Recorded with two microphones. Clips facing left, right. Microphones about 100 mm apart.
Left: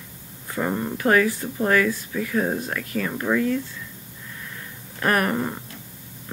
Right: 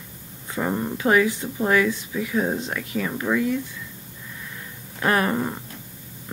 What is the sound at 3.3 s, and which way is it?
Speech, 5° left (ahead or behind).